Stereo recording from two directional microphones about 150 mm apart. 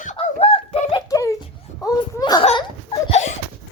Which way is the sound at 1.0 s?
20° left (ahead or behind).